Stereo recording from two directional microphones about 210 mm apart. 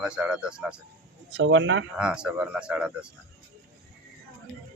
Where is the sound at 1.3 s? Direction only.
65° right (ahead or behind).